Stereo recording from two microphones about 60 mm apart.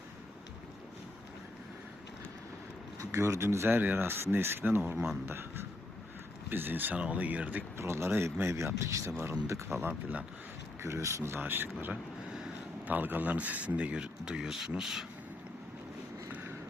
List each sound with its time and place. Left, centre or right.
3.0 s speech: right
6.5 s speech: right
7.8 s speech: right
11.3 s speech: right; by 15.0 s centre